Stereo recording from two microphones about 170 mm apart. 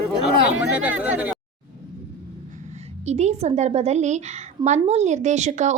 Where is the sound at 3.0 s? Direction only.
40° right (ahead or behind).